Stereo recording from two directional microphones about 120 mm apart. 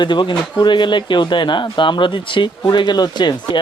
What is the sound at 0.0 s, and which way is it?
Speech, 40° left (ahead or behind).